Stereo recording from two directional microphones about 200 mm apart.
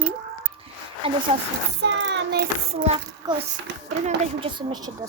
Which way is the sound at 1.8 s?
60° right (ahead or behind).